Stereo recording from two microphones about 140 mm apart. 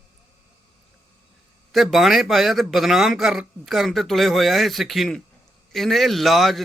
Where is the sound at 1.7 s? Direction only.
Centre (ahead or behind).